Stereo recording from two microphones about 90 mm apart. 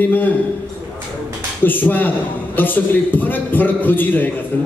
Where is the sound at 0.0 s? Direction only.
20° left (ahead or behind).